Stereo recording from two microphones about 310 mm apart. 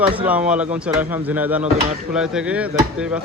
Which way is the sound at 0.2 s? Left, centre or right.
Centre.